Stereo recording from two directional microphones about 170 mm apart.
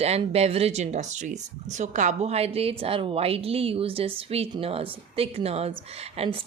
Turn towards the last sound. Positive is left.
turn(degrees=-35)  # may be behind; listen again after turning